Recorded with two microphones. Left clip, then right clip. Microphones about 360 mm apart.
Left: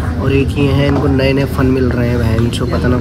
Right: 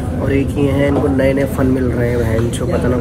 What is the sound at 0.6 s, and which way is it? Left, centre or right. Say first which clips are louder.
Speech: even; centre.